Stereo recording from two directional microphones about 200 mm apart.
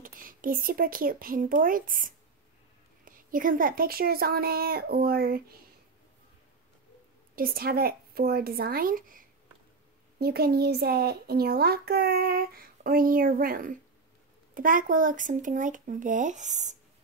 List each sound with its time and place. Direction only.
0.0 s a child's voice: 45° right (ahead or behind)
7.3 s a child's voice: 45° right (ahead or behind)